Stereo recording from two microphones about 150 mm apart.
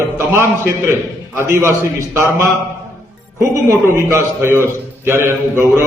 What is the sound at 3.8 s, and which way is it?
A man's voice, 20° right (ahead or behind).